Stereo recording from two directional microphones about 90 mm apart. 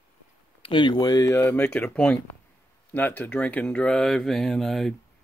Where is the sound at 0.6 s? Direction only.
60° left (ahead or behind).